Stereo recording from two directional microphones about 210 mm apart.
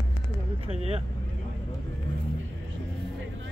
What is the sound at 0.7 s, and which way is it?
Speech, 30° right (ahead or behind).